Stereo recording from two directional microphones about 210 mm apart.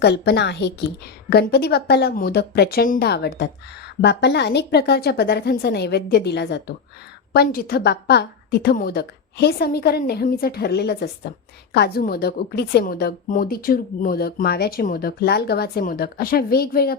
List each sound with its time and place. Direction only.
0.0 s a woman's voice: 55° left (ahead or behind)